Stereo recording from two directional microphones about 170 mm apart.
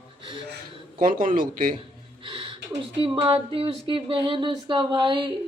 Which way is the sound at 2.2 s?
30° right (ahead or behind).